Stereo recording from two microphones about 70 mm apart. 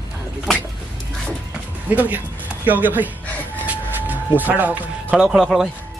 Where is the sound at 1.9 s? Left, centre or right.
Right.